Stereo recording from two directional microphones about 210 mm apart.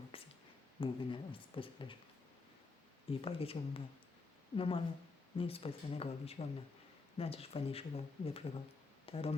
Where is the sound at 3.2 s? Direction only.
25° left (ahead or behind).